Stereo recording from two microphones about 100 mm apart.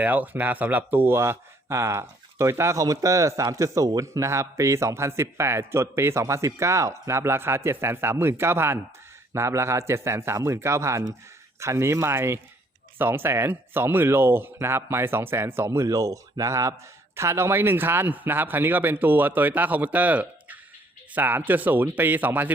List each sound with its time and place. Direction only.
0.0 s speech: 15° right (ahead or behind)